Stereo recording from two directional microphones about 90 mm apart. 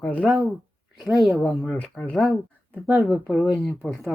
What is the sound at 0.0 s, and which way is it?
Speech, 15° left (ahead or behind).